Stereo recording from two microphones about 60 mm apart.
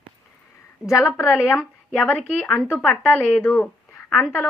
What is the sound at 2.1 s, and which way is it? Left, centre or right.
Speech, left.